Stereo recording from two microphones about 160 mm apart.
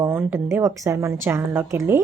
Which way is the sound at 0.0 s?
15° right (ahead or behind).